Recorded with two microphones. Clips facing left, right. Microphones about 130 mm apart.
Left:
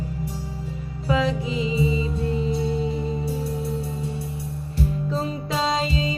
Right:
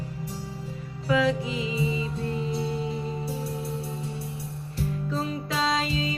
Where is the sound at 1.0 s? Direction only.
25° left (ahead or behind).